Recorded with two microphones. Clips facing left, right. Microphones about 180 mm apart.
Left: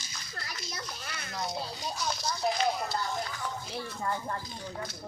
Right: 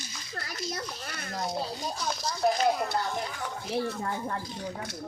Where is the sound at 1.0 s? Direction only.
40° right (ahead or behind).